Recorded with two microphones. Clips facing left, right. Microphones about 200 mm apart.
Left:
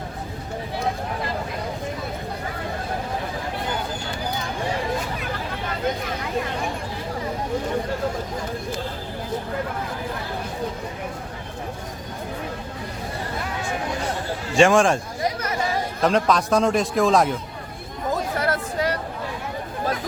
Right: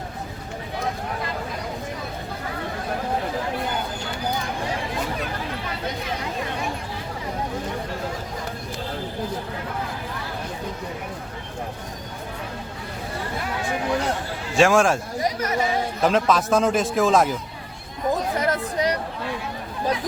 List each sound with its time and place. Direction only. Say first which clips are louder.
14.5 s a man's voice: left 1 dB; centre (ahead or behind)
16.0 s a man's voice: even; centre (ahead or behind)
18.1 s chatter: right 1 dB; 20° right (ahead or behind)